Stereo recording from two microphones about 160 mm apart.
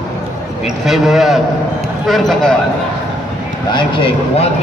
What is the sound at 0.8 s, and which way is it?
A man's voice, centre (ahead or behind).